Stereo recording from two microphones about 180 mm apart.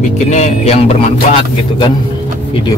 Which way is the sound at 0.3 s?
40° left (ahead or behind).